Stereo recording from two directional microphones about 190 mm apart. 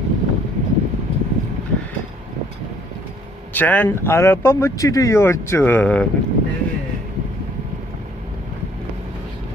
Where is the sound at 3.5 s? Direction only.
10° left (ahead or behind).